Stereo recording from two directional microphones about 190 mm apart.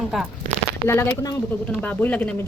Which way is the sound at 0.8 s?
15° left (ahead or behind).